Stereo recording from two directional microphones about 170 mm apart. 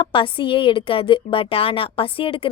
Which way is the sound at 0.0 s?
30° left (ahead or behind).